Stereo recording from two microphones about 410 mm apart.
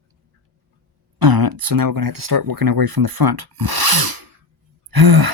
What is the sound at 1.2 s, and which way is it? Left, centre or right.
Speech, right.